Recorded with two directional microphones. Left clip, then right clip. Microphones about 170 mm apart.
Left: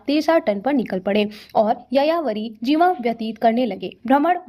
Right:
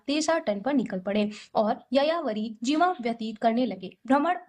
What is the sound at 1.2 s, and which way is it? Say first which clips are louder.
A woman's voice: left 7 dB; 30° left (ahead or behind).